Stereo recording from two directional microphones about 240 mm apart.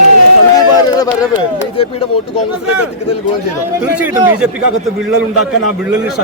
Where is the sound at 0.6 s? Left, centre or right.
Centre.